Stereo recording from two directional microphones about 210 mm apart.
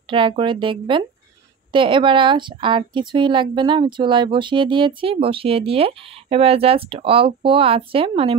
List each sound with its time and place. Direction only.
0.1 s a woman's voice: 25° right (ahead or behind)